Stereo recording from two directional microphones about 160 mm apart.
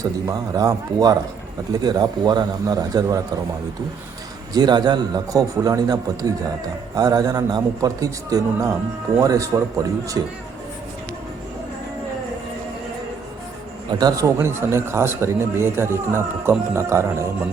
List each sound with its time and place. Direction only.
0.0 s a man's voice: 20° right (ahead or behind)
4.5 s a man's voice: 25° right (ahead or behind)
14.0 s speech: 20° right (ahead or behind)